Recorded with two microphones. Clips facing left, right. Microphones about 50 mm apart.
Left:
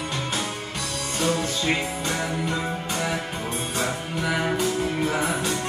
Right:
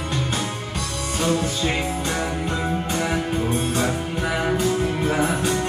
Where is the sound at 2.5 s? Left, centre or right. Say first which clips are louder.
Right 3 dB; centre.